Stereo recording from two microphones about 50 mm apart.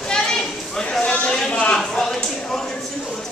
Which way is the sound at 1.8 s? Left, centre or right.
Centre.